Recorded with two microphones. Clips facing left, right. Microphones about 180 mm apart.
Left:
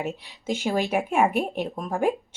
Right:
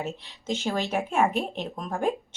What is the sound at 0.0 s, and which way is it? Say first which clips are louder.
Speech: left 3 dB; 15° left (ahead or behind).